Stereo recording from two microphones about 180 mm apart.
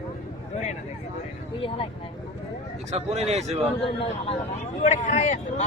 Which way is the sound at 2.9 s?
35° right (ahead or behind).